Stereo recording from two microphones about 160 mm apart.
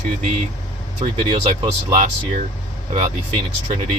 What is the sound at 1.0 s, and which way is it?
Speech, 35° right (ahead or behind).